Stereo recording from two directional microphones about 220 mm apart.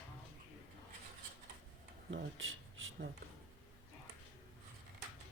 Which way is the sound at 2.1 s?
60° right (ahead or behind).